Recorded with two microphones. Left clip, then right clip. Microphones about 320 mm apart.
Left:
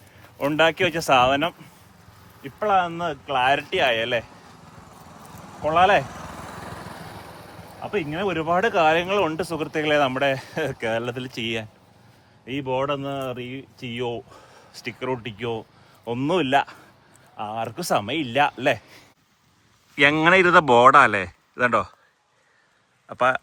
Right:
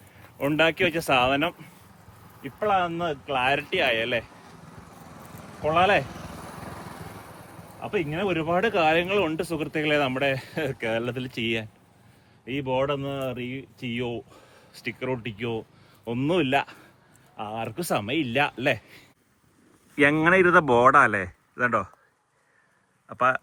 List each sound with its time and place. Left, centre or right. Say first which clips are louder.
0.2 s speech: left 3 dB; centre
6.1 s vehicle: left 4 dB; left
7.8 s speech: left 1 dB; centre
23.0 s speech: left 2 dB; centre